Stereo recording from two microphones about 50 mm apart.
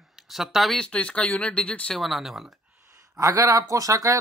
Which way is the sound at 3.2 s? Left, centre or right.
Right.